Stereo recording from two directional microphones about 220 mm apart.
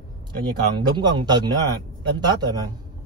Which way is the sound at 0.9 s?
20° right (ahead or behind).